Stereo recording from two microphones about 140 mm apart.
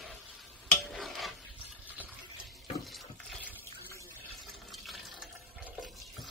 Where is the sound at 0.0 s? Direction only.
Centre (ahead or behind).